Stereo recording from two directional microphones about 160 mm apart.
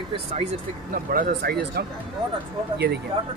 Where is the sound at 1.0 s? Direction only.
65° right (ahead or behind).